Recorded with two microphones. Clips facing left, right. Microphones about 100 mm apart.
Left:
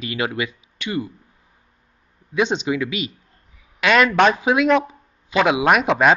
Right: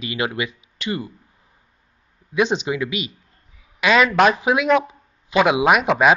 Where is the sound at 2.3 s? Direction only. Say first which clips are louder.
Right 1 dB; 5° right (ahead or behind).